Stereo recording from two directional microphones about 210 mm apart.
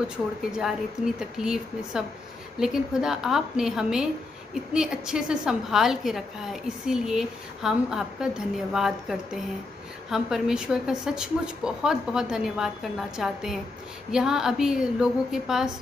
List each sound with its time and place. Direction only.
0.5 s a woman's voice: centre (ahead or behind)